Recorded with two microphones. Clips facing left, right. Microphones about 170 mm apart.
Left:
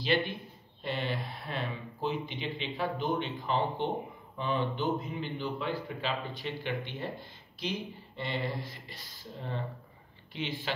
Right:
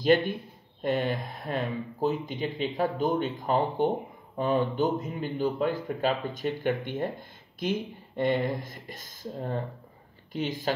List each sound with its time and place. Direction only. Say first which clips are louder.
0.0 s speech: right 7 dB; 45° right (ahead or behind)